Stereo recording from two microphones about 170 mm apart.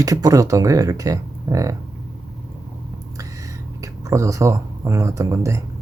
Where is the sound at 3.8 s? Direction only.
20° right (ahead or behind).